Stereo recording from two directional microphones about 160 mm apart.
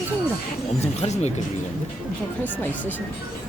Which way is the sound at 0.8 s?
45° left (ahead or behind).